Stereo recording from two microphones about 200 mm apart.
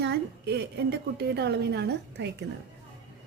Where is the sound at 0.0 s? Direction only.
55° right (ahead or behind).